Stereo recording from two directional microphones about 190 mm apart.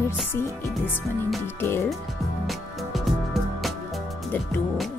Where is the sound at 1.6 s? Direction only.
10° left (ahead or behind).